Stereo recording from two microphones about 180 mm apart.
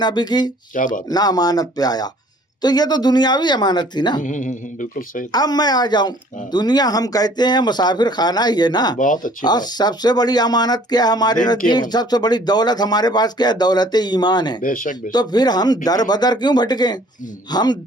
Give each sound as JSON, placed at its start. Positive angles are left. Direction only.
{"t": 0.0, "sound": "speech", "side_deg": 25}
{"t": 0.7, "sound": "speech", "side_deg": 45}
{"t": 1.1, "sound": "speech", "side_deg": 20}
{"t": 4.2, "sound": "speech", "side_deg": 45}
{"t": 5.3, "sound": "speech", "side_deg": 20}
{"t": 14.6, "sound": "speech", "side_deg": 50}
{"t": 15.1, "sound": "speech", "side_deg": 25}